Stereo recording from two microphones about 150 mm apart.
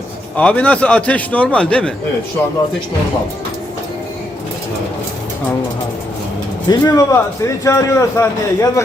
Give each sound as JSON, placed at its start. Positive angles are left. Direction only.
{"t": 0.3, "sound": "a man's voice", "side_deg": 10}
{"t": 6.7, "sound": "a man's voice", "side_deg": 25}